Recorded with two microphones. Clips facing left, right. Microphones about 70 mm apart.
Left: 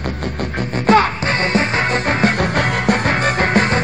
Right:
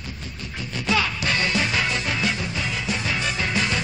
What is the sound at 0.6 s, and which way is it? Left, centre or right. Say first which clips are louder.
Music: left 11 dB; left.